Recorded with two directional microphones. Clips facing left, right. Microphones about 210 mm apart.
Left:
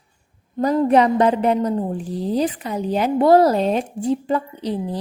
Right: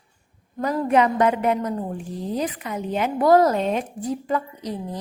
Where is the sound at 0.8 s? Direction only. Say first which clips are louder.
Left 2 dB; 35° left (ahead or behind).